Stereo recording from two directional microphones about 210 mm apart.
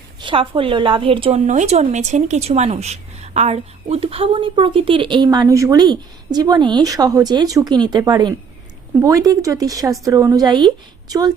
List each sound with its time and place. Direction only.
0.2 s a woman's voice: 25° right (ahead or behind)